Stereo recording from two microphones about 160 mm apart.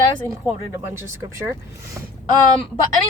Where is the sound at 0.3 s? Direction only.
15° right (ahead or behind).